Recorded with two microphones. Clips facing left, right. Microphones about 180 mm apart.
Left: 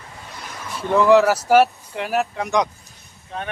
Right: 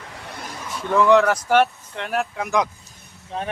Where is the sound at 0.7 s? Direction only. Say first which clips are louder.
Left 2 dB; centre (ahead or behind).